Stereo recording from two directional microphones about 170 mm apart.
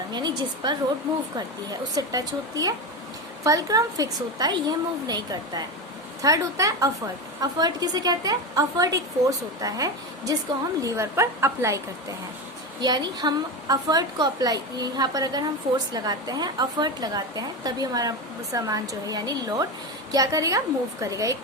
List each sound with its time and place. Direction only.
0.1 s a woman's voice: 25° right (ahead or behind)
12.8 s a woman's voice: 25° right (ahead or behind)